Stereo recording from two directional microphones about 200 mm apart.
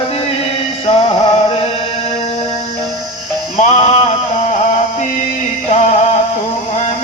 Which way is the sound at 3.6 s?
30° left (ahead or behind).